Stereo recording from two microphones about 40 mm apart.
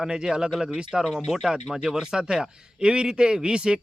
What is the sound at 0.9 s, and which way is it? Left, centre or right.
A man's voice, centre.